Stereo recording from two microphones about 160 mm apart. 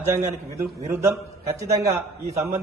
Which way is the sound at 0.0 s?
20° right (ahead or behind).